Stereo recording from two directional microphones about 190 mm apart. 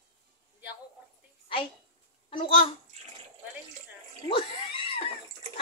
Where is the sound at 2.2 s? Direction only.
30° left (ahead or behind).